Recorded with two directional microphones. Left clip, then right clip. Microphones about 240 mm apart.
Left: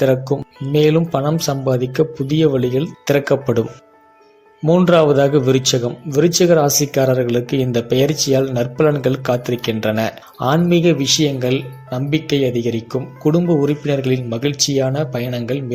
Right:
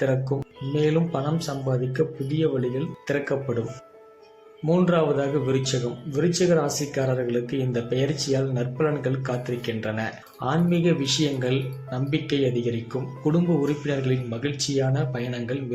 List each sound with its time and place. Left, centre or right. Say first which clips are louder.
0.0 s speech: left 9 dB; left
4.6 s speech: left 9 dB; left